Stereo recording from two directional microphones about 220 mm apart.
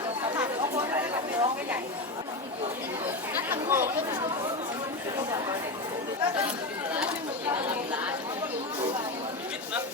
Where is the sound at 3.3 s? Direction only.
10° right (ahead or behind).